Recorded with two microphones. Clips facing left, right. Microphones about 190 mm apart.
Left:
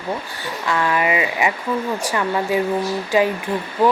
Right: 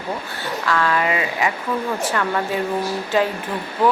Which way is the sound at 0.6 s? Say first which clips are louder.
Left 1 dB; 15° left (ahead or behind).